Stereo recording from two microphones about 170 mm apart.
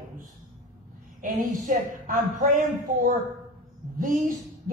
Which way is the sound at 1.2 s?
55° right (ahead or behind).